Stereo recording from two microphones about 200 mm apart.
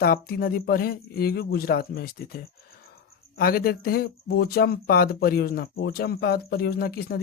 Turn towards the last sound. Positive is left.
turn(degrees=50)  # may be behind; listen again after turning